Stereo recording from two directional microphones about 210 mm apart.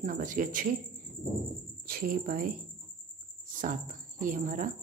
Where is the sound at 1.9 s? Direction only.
45° right (ahead or behind).